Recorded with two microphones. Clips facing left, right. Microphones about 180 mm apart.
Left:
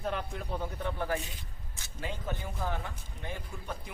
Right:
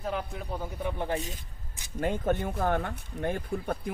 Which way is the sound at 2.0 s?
55° right (ahead or behind).